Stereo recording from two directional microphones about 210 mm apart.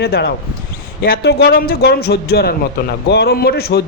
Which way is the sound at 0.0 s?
50° left (ahead or behind).